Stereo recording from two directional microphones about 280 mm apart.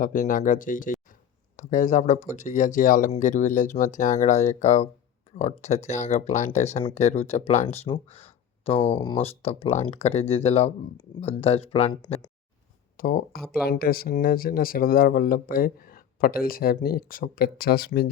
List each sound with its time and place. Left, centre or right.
0.0 s speech: left
13.0 s speech: left